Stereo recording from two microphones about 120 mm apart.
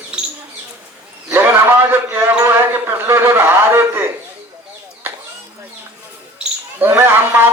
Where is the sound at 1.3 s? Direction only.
15° right (ahead or behind).